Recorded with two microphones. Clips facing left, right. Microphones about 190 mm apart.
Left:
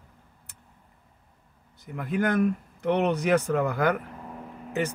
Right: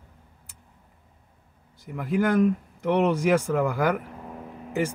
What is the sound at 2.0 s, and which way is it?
Speech, 15° right (ahead or behind).